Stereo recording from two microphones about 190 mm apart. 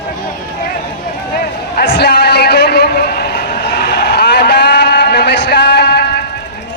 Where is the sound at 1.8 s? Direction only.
60° left (ahead or behind).